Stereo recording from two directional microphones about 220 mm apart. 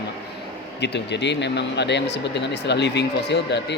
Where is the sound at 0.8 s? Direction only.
50° left (ahead or behind).